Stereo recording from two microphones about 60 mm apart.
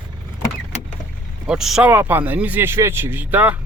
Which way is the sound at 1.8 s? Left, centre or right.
Right.